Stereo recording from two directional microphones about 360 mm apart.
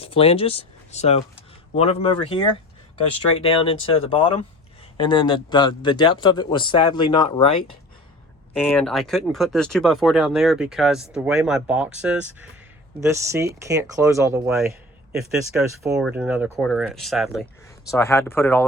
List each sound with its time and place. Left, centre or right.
0.0 s speech: centre
8.5 s speech: centre